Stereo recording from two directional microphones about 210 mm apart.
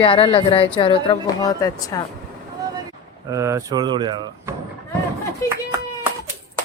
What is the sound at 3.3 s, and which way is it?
Speech, 15° right (ahead or behind).